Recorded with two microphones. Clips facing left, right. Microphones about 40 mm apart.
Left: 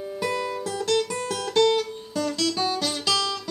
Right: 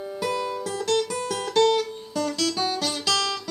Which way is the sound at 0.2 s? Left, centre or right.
Centre.